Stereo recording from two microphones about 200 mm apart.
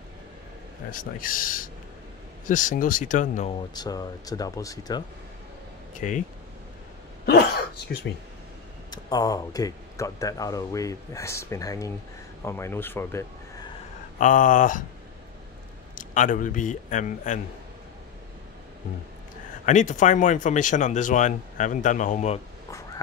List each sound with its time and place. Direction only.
0.9 s speech: 45° left (ahead or behind)
3.7 s speech: 20° left (ahead or behind)
5.9 s speech: 40° left (ahead or behind)
7.2 s a sound: 55° left (ahead or behind)
8.9 s speech: 20° left (ahead or behind)
14.1 s speech: 40° left (ahead or behind)
15.9 s speech: 40° left (ahead or behind)
19.6 s speech: 40° left (ahead or behind)